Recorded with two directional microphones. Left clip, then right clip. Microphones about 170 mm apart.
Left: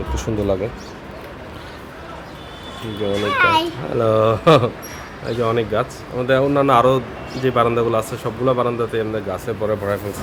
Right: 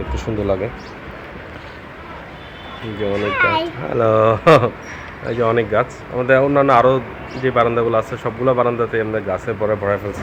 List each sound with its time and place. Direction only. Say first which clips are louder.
0.1 s speech: even; 15° left (ahead or behind)
3.2 s speech: left 1 dB; 15° left (ahead or behind)
8.2 s speech: right 3 dB; 5° left (ahead or behind)